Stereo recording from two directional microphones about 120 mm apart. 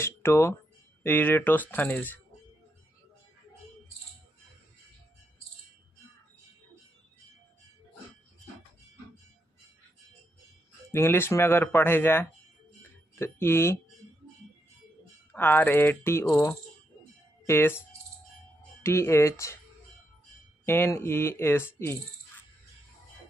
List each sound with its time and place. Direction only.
0.0 s speech: 20° left (ahead or behind)
10.9 s speech: 20° left (ahead or behind)
15.3 s speech: 15° left (ahead or behind)
20.6 s speech: 20° left (ahead or behind)